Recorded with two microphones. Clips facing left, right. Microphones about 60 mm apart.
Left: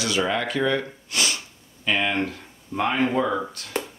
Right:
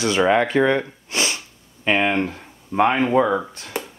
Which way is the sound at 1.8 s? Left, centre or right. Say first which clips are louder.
Right 4 dB; right.